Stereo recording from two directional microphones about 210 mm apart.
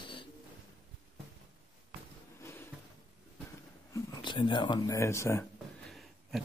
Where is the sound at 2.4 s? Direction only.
10° left (ahead or behind).